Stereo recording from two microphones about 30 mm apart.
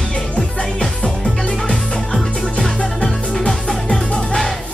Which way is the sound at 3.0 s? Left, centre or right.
Centre.